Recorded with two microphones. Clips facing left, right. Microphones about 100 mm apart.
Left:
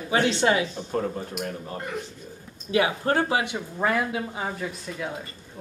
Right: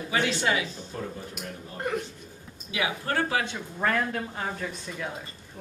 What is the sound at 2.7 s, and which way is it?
Speech, 40° left (ahead or behind).